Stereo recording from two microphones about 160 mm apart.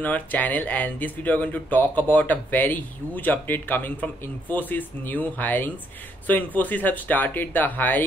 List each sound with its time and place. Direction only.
0.0 s speech: 10° left (ahead or behind)